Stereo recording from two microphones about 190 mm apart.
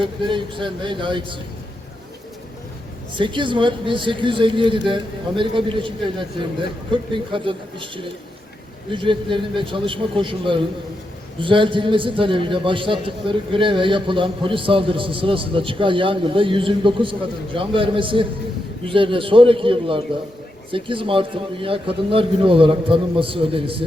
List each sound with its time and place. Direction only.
0.0 s a man's voice: 25° right (ahead or behind)
3.2 s a man's voice: 25° right (ahead or behind)